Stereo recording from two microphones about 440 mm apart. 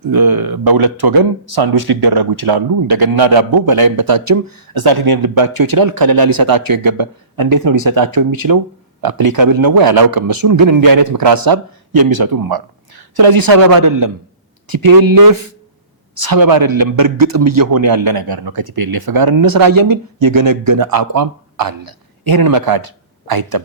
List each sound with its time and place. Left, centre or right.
0.1 s speech: right